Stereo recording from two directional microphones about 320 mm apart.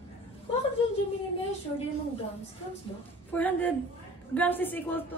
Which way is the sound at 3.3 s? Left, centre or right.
Centre.